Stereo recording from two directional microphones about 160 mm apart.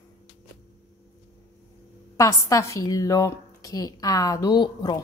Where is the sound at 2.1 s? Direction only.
20° left (ahead or behind).